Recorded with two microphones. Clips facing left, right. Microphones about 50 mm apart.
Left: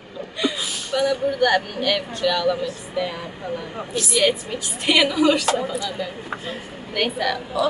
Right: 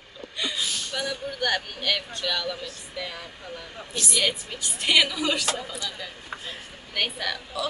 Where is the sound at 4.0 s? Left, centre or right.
Centre.